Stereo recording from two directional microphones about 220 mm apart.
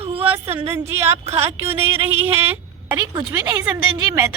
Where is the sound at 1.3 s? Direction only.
25° right (ahead or behind).